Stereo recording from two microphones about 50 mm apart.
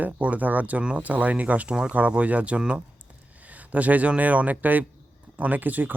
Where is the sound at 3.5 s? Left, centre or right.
Right.